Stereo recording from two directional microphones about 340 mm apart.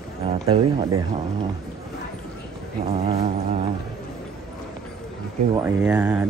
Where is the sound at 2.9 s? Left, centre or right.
Centre.